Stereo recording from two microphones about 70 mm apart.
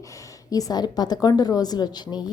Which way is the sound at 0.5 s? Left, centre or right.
Left.